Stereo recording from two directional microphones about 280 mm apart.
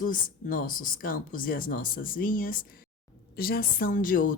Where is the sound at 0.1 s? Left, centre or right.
Left.